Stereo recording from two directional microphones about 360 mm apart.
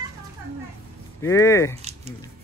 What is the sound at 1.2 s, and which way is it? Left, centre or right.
Speech, centre.